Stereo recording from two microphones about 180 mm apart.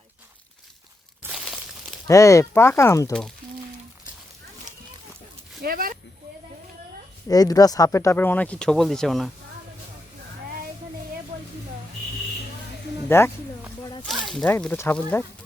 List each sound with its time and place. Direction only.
1.3 s a sound: centre (ahead or behind)
2.0 s speech: 15° left (ahead or behind)
3.1 s speech: 5° left (ahead or behind)
5.6 s speech: 55° right (ahead or behind)
7.3 s speech: 20° left (ahead or behind); by 9.3 s centre (ahead or behind)
13.1 s speech: 15° left (ahead or behind)
14.0 s a sound: centre (ahead or behind)
14.4 s speech: 10° left (ahead or behind)